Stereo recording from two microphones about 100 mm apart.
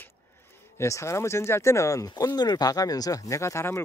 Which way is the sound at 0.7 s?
30° left (ahead or behind).